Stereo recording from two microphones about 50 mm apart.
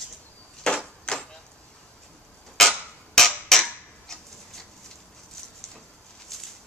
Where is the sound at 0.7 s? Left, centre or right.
Centre.